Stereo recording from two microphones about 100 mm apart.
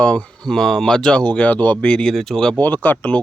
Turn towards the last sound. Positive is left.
turn(degrees=15)  # may be behind; listen again after turning